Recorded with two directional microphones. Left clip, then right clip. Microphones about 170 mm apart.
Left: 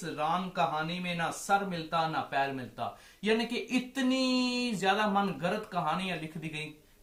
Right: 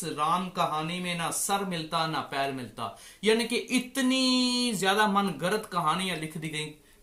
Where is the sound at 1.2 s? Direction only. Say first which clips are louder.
Left 2 dB; 15° right (ahead or behind).